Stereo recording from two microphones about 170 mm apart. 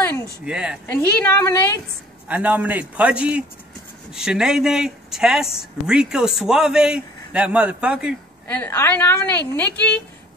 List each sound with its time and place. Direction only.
0.0 s a sound: 10° left (ahead or behind)
0.5 s speech: 5° right (ahead or behind)
0.9 s a woman's voice: 10° left (ahead or behind)
2.2 s a man's voice: 10° right (ahead or behind)
8.5 s a woman's voice: 10° left (ahead or behind)